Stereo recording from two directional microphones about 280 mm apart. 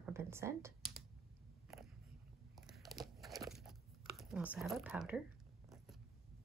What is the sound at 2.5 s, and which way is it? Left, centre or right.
Biting, centre.